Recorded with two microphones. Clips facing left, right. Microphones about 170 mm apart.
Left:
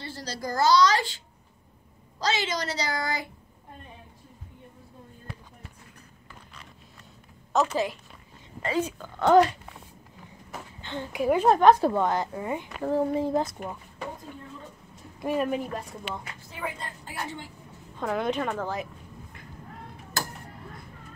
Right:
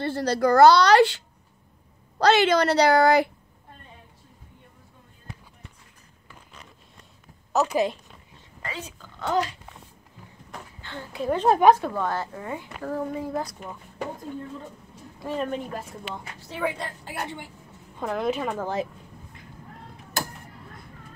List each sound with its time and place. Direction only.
0.0 s speech: 60° right (ahead or behind)
7.5 s speech: 15° right (ahead or behind)
9.3 s speech: 55° left (ahead or behind)
10.8 s speech: 20° left (ahead or behind)
11.4 s a woman's voice: 5° right (ahead or behind)
11.8 s speech: 20° left (ahead or behind)
15.1 s speech: 10° left (ahead or behind)
16.3 s a woman's voice: 75° right (ahead or behind)
17.9 s a woman's voice: centre (ahead or behind)